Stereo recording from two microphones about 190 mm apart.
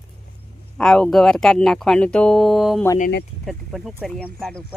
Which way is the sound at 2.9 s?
45° left (ahead or behind).